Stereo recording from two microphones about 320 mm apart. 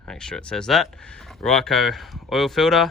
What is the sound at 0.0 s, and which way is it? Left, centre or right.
Speech, centre.